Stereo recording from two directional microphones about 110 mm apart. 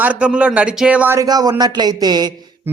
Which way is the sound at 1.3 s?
35° right (ahead or behind).